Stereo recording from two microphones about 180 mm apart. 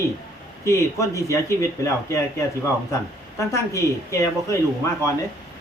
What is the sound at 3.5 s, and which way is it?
A man's voice, 15° left (ahead or behind).